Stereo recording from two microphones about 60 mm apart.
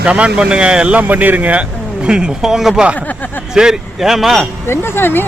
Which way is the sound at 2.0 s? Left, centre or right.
Centre.